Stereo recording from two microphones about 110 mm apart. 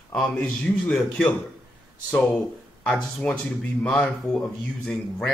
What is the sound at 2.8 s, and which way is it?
Speech, 5° left (ahead or behind).